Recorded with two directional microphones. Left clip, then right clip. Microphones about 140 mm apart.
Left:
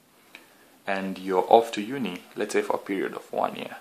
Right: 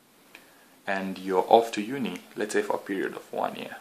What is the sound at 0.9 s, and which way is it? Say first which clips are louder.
Speech: left 1 dB; 10° left (ahead or behind).